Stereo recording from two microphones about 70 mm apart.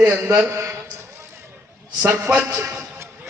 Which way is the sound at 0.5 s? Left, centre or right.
Right.